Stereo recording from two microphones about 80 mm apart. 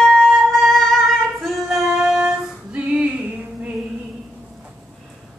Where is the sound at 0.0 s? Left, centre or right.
Centre.